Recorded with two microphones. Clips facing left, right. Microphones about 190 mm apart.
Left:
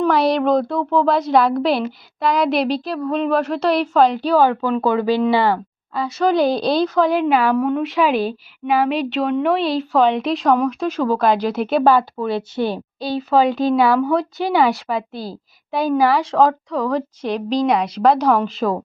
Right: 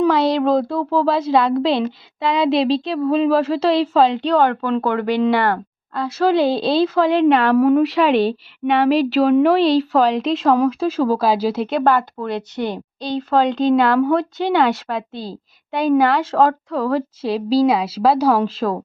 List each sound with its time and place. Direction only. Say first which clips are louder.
0.1 s speech: even; centre (ahead or behind)
2.6 s speech: right 3 dB; 25° right (ahead or behind)
2.9 s speech: right 4 dB; centre (ahead or behind)
4.4 s speech: left 2 dB; 10° left (ahead or behind)
11.8 s speech: left 3 dB; 10° left (ahead or behind)